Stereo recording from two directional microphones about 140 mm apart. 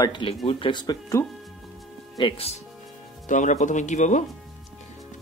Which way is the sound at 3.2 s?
60° left (ahead or behind).